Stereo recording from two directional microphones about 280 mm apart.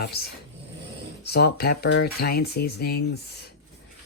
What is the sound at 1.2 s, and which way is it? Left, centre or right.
Speech, left.